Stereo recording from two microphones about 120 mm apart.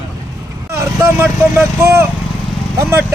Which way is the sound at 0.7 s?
20° right (ahead or behind).